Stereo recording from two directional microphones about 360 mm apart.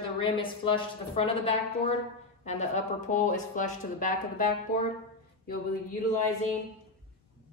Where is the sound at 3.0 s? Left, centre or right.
Left.